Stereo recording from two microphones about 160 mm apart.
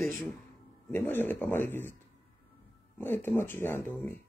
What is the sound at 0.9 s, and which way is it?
Speech, 15° left (ahead or behind).